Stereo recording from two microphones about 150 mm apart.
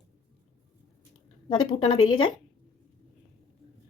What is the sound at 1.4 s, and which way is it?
Speech, 35° left (ahead or behind).